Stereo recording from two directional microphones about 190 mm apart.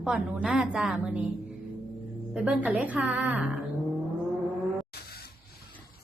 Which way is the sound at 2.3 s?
5° right (ahead or behind).